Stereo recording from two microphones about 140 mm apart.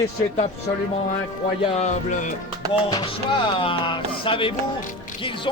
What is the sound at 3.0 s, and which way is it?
Speech, 35° left (ahead or behind).